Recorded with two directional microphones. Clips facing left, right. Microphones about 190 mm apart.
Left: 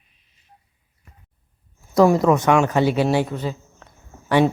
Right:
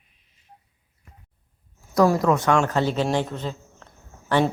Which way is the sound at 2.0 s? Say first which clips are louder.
Left 4 dB; 20° left (ahead or behind).